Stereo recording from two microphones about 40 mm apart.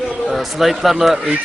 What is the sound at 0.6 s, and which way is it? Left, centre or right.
Speech, centre.